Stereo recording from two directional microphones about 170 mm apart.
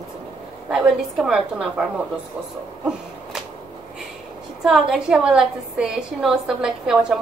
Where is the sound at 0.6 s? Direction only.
5° right (ahead or behind).